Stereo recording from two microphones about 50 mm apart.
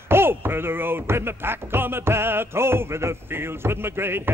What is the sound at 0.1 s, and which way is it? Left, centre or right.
Speech, right.